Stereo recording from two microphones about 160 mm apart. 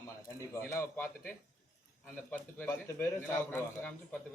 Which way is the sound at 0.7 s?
15° left (ahead or behind).